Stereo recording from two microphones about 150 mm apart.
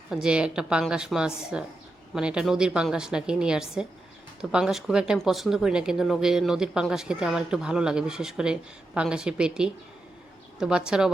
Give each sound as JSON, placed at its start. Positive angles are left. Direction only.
{"t": 0.1, "sound": "speech", "side_deg": -5}